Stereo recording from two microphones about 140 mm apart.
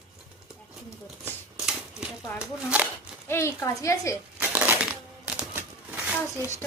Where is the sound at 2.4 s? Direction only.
10° right (ahead or behind).